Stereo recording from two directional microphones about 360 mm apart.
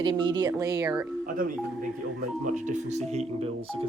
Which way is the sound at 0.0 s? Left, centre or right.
Centre.